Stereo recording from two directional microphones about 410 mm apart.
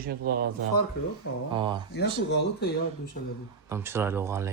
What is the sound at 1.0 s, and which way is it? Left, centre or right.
Speech, left.